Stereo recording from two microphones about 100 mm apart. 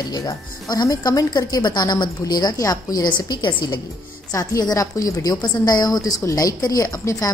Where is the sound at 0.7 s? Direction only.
40° left (ahead or behind).